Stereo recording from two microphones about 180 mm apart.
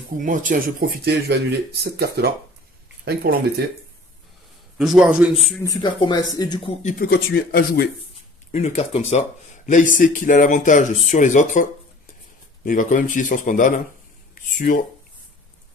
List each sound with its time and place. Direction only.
0.2 s speech: 45° right (ahead or behind)
4.7 s speech: 5° right (ahead or behind)
5.6 s speech: 20° left (ahead or behind)
6.8 s speech: 45° left (ahead or behind)
7.1 s speech: 60° left (ahead or behind)
8.5 s speech: 40° left (ahead or behind)
14.3 s a sound: 50° left (ahead or behind)